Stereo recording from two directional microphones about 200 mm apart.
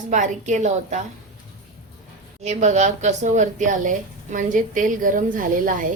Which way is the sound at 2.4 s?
35° right (ahead or behind).